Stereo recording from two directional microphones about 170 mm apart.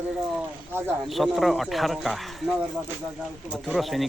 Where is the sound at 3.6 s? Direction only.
Centre (ahead or behind).